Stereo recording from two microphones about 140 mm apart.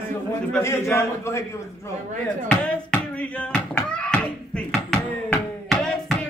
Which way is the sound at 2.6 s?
10° left (ahead or behind).